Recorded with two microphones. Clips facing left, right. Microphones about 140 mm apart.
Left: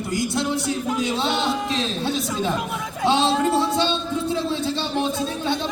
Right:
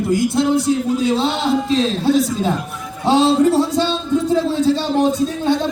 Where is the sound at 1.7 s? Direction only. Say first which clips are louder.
Right 8 dB; 35° right (ahead or behind).